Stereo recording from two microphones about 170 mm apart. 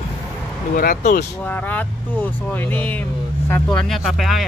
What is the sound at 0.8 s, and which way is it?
Speech, 60° left (ahead or behind).